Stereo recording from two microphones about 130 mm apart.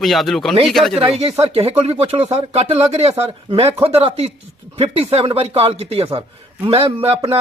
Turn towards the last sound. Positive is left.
turn(degrees=-45)  # may be behind; listen again after turning